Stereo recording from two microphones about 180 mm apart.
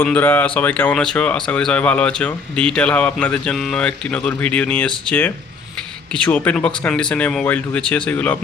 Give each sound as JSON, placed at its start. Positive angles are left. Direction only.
{"t": 0.0, "sound": "speech", "side_deg": 10}